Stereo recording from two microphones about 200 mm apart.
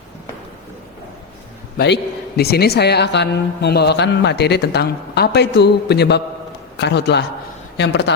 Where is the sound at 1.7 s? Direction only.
55° left (ahead or behind).